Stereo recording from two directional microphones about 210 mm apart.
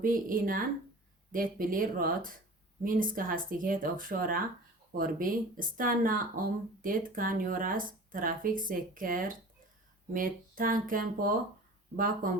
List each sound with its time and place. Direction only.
0.0 s speech: 40° right (ahead or behind)